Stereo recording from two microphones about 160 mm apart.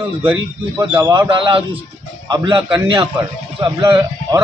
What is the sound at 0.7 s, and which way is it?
Speech, 15° right (ahead or behind).